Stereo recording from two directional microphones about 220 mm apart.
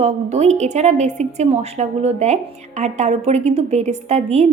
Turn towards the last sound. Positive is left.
turn(degrees=-30)  # may be behind; listen again after turning